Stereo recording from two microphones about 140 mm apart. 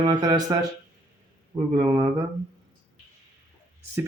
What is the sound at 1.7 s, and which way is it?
Speech, 25° right (ahead or behind).